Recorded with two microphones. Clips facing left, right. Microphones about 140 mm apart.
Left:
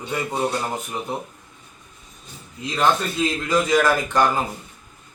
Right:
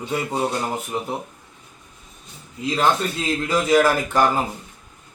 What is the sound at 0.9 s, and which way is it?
Speech, 15° right (ahead or behind).